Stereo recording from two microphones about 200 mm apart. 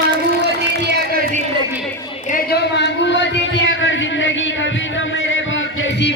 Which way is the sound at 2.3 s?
55° left (ahead or behind).